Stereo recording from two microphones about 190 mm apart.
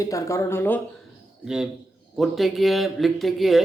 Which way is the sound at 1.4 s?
5° right (ahead or behind).